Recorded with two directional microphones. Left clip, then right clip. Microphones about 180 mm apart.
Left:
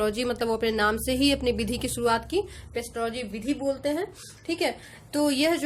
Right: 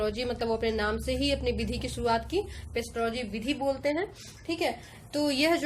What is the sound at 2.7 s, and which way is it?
A woman's voice, 20° left (ahead or behind).